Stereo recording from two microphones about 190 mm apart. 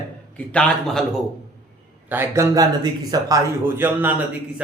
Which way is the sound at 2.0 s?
10° right (ahead or behind).